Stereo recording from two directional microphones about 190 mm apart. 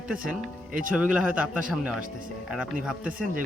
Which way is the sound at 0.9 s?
5° right (ahead or behind).